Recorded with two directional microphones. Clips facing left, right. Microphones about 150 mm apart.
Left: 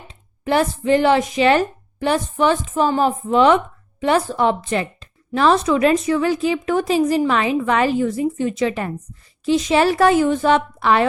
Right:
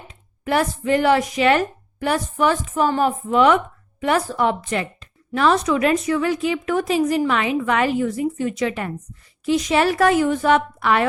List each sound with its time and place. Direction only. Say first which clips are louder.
0.1 s a woman's voice: left 2 dB; 25° left (ahead or behind)